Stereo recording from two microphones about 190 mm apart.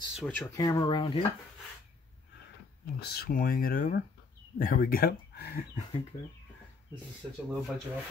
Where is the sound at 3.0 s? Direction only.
55° left (ahead or behind).